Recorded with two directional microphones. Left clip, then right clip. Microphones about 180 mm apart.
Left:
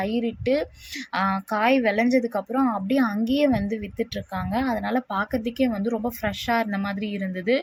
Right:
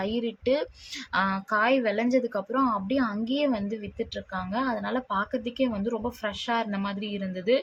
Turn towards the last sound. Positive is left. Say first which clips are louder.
# left 1 dB
turn(degrees=10)  # may be behind; listen again after turning